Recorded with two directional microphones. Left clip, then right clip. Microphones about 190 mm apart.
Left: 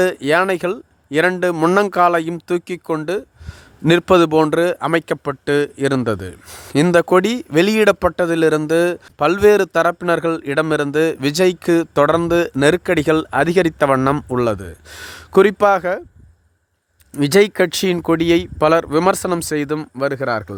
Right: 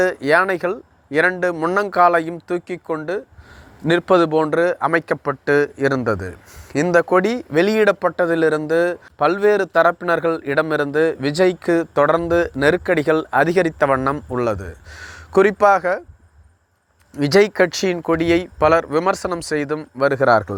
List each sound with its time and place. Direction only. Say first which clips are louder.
0.0 s speech: even; 45° left (ahead or behind)
8.1 s a man's voice: even; 20° left (ahead or behind)
8.4 s speech: left 2 dB; 50° left (ahead or behind)
10.0 s speech: left 1 dB; 45° left (ahead or behind)
17.2 s speech: left 1 dB; 45° left (ahead or behind)
20.1 s speech: right 6 dB; 10° left (ahead or behind)